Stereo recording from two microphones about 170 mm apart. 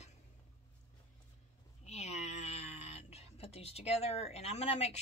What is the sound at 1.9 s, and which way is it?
Speech, 40° left (ahead or behind).